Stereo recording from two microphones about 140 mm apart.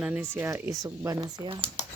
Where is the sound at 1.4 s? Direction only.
40° right (ahead or behind).